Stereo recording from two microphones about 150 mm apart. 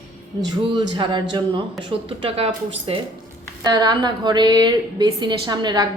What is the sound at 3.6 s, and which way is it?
A woman's voice, 25° right (ahead or behind).